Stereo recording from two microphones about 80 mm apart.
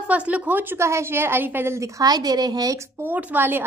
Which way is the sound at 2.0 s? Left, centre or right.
Right.